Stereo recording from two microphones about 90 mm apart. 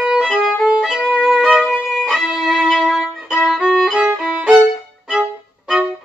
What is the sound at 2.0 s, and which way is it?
Violin, centre (ahead or behind).